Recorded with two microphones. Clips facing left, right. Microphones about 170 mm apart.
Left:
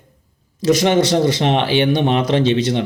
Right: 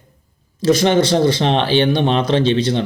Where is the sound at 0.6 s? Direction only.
20° left (ahead or behind).